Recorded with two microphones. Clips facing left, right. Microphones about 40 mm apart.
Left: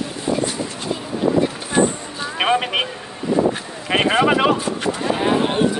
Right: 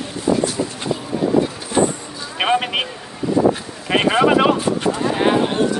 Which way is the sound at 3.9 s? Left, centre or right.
Centre.